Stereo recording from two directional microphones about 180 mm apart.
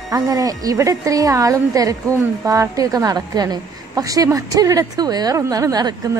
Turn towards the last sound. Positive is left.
turn(degrees=-20)  # may be behind; listen again after turning